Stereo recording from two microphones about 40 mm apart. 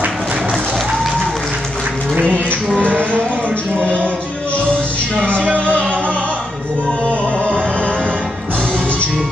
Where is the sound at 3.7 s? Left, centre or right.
Left.